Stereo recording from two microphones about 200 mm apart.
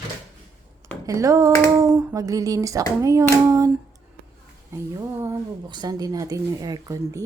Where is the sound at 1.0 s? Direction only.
15° right (ahead or behind).